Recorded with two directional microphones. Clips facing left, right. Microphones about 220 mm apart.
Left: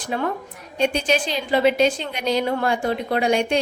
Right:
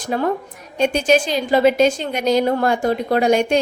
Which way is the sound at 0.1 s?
40° right (ahead or behind).